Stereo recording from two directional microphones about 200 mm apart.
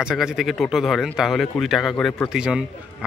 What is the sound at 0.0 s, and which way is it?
A man's voice, 5° right (ahead or behind).